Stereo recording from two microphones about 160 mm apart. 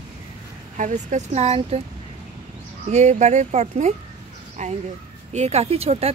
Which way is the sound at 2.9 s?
45° right (ahead or behind).